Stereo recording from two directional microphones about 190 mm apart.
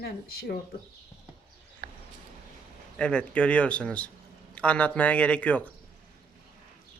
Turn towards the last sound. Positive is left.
turn(degrees=10)  # may be behind; listen again after turning